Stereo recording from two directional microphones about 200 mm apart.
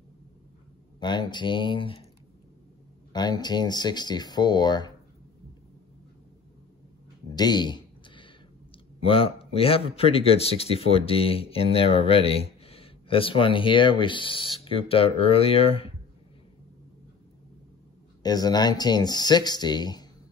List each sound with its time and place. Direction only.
0.9 s speech: 20° left (ahead or behind)
3.1 s speech: 20° left (ahead or behind)
7.3 s a sound: 20° left (ahead or behind)
9.0 s speech: 25° left (ahead or behind)
18.2 s speech: 20° left (ahead or behind)